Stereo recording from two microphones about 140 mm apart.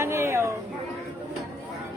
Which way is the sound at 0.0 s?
20° right (ahead or behind).